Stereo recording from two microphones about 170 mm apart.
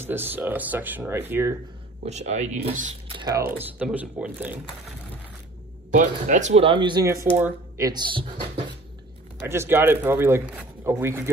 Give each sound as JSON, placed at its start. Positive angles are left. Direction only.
{"t": 0.0, "sound": "speech", "side_deg": -10}
{"t": 2.0, "sound": "speech", "side_deg": -40}
{"t": 3.2, "sound": "speech", "side_deg": -20}
{"t": 3.7, "sound": "speech", "side_deg": -10}
{"t": 5.9, "sound": "speech", "side_deg": -45}
{"t": 9.4, "sound": "speech", "side_deg": -15}